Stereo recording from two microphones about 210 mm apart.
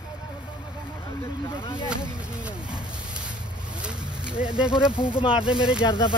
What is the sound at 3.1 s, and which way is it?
Vehicle, 5° right (ahead or behind).